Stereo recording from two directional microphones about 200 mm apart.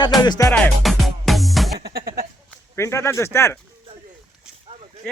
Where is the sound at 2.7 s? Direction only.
15° left (ahead or behind).